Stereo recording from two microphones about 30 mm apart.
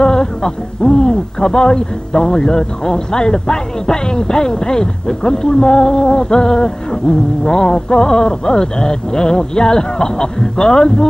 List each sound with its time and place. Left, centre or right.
0.0 s speech: left